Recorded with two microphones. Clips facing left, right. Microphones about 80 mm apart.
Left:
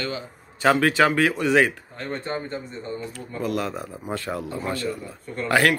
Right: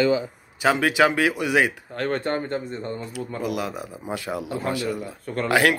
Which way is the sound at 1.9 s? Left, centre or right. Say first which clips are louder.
Right 5 dB; right.